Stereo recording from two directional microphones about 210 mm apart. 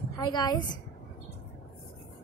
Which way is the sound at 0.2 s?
20° left (ahead or behind).